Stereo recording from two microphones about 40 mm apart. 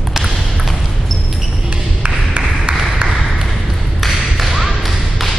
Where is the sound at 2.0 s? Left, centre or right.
Right.